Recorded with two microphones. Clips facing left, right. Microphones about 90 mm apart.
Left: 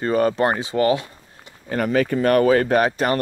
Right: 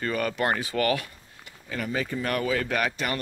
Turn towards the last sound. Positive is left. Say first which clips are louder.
# left 9 dB
turn(degrees=40)  # may be behind; listen again after turning